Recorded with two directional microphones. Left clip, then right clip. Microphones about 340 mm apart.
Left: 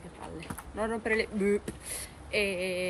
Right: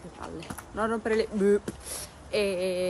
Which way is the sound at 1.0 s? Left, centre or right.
Centre.